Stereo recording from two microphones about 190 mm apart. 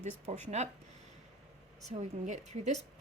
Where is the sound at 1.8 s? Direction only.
35° right (ahead or behind).